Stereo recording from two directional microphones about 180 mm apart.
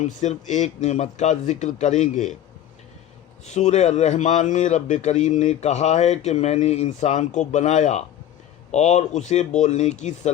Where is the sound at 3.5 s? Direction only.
40° left (ahead or behind).